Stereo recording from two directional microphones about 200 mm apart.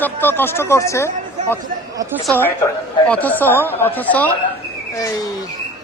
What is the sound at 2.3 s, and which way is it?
A man's voice, 10° left (ahead or behind).